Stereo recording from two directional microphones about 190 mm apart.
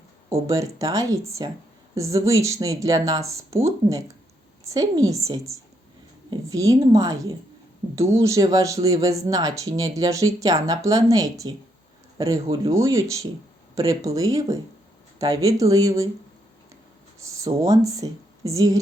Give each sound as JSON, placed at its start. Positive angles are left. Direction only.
{"t": 0.3, "sound": "a woman's voice", "side_deg": -15}
{"t": 17.2, "sound": "speech", "side_deg": -15}